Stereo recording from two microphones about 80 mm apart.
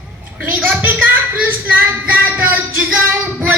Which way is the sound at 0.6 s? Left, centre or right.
Right.